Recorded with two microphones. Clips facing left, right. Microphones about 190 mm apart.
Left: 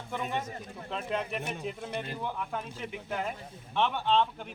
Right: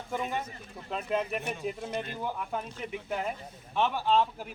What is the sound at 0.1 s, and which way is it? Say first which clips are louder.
Speech: right 1 dB; 5° right (ahead or behind).